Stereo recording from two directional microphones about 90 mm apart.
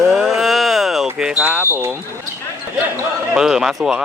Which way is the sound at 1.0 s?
15° right (ahead or behind).